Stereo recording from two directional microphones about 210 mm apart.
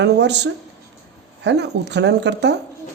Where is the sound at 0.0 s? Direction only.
55° right (ahead or behind).